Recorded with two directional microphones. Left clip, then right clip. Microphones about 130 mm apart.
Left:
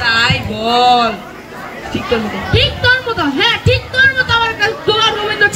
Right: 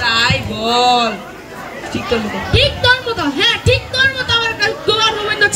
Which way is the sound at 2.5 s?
15° right (ahead or behind).